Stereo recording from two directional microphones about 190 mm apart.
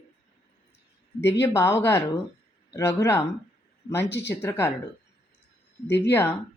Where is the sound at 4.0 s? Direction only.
65° left (ahead or behind).